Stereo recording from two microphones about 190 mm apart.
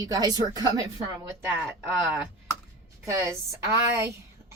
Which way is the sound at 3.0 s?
15° right (ahead or behind).